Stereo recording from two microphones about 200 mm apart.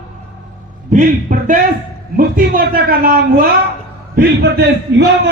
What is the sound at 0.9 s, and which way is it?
A man's voice, 40° right (ahead or behind).